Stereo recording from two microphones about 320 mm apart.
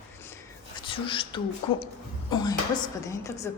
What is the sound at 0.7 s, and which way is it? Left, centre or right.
Whispering, centre.